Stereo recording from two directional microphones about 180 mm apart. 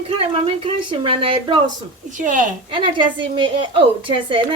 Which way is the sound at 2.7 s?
25° right (ahead or behind).